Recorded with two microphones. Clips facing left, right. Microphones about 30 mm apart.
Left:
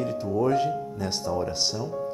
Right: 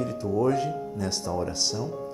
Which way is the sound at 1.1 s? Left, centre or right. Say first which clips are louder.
Left 3 dB; centre.